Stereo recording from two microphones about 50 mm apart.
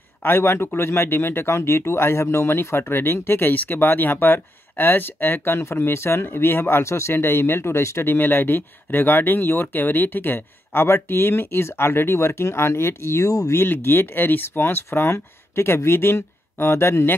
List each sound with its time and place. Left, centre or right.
0.2 s speech: left
8.0 s speech: left
13.7 s speech: left